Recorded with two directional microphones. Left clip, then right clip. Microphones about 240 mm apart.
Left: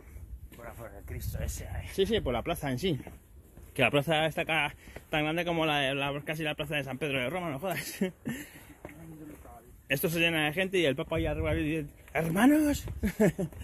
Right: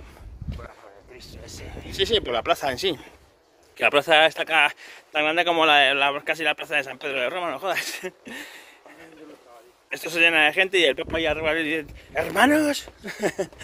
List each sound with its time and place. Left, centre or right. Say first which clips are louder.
1.1 s speech: right 3 dB; left
2.0 s speech: right 6 dB; centre
9.8 s speech: right 8 dB; centre
11.1 s speech: right 9 dB; right